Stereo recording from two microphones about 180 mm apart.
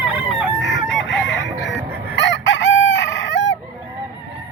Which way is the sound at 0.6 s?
80° left.